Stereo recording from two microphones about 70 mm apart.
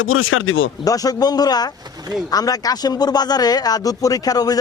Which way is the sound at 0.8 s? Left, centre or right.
Left.